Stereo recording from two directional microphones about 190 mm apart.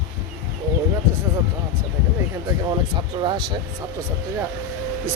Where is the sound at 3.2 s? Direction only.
25° right (ahead or behind).